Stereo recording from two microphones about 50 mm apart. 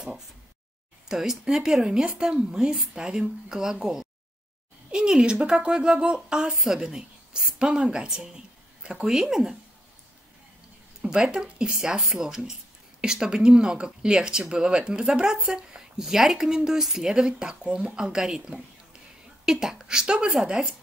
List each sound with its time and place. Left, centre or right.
1.0 s speech: centre
6.5 s a woman's voice: centre
9.0 s speech: centre
11.0 s speech: centre